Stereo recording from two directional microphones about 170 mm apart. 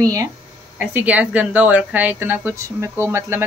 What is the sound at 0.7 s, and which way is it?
Speech, 10° right (ahead or behind).